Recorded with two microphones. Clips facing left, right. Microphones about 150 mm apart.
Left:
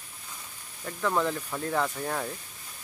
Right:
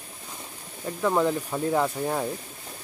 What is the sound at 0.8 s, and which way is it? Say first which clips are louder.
Speech: right 4 dB; 20° right (ahead or behind).